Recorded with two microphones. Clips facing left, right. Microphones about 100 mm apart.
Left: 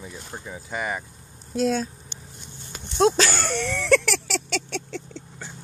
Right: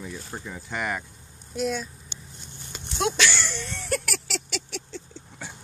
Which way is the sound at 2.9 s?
35° left (ahead or behind).